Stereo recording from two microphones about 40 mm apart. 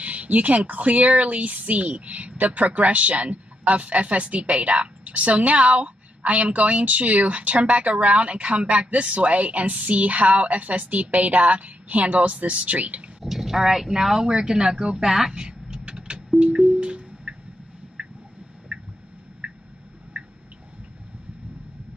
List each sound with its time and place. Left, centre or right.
0.0 s speech: right
13.2 s speech: centre; by 15.0 s right
15.0 s speech: centre
15.3 s vehicle: right
16.3 s music: right
18.0 s a sound: right
19.4 s squish: right